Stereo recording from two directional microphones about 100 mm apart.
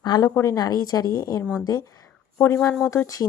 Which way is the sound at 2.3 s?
25° left (ahead or behind).